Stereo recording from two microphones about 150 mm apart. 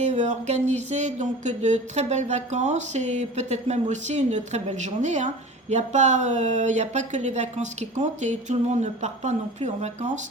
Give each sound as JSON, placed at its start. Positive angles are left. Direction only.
{"t": 0.0, "sound": "speech", "side_deg": -50}